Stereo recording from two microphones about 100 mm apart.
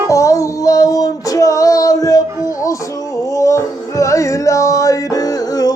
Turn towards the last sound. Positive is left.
turn(degrees=35)  # may be behind; listen again after turning